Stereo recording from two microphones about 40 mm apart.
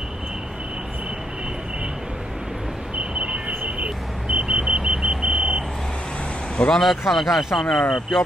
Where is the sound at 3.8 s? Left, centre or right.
Right.